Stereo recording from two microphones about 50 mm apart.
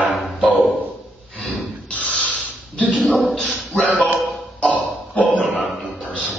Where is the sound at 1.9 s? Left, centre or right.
Left.